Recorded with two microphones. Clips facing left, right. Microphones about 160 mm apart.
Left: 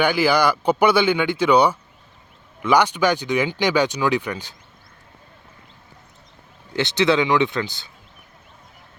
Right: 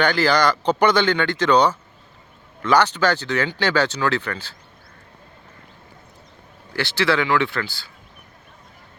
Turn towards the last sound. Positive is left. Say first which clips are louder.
# left 3 dB
turn(degrees=20)  # may be behind; listen again after turning